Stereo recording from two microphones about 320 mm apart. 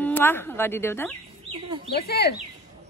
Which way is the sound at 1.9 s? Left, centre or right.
Left.